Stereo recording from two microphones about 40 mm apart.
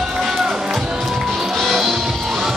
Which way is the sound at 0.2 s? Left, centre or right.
Centre.